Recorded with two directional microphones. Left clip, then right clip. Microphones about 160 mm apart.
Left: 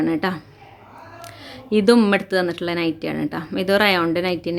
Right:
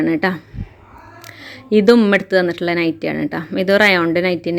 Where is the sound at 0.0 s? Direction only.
25° right (ahead or behind).